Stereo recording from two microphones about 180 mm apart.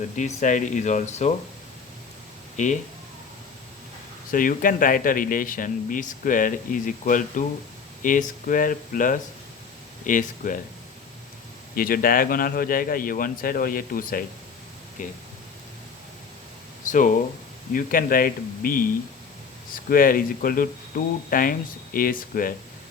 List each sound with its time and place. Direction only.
0.2 s speech: 45° left (ahead or behind)
2.6 s speech: 40° left (ahead or behind)
4.3 s speech: 50° left (ahead or behind)
11.7 s speech: 55° left (ahead or behind)
17.7 s speech: 50° left (ahead or behind)